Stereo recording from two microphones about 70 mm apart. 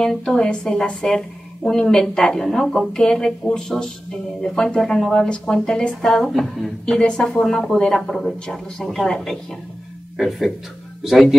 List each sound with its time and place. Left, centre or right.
0.0 s a woman's voice: centre